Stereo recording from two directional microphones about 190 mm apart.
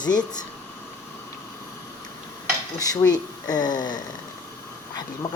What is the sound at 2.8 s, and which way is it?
Speech, 20° left (ahead or behind).